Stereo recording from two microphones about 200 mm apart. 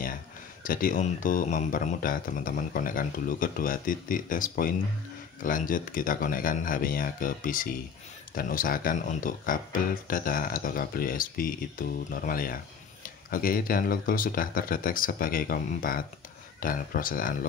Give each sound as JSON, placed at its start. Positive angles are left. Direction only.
{"t": 0.7, "sound": "speech", "side_deg": 45}